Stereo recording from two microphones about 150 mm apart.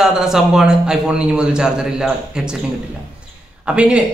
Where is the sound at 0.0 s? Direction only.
5° right (ahead or behind).